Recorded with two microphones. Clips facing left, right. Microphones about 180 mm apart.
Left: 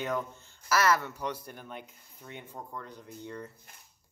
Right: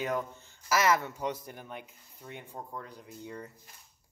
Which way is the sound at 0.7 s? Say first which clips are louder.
Even; 20° right (ahead or behind).